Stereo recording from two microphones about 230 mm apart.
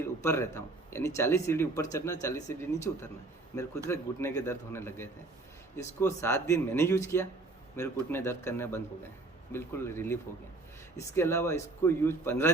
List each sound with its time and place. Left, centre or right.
0.0 s speech: centre